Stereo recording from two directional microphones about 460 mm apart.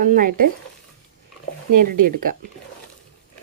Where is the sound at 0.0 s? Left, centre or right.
Centre.